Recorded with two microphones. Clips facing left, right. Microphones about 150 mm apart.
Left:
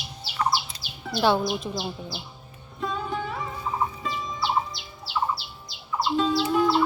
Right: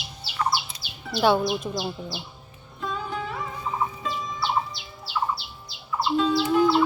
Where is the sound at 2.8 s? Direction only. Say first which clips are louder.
Left 1 dB; centre (ahead or behind).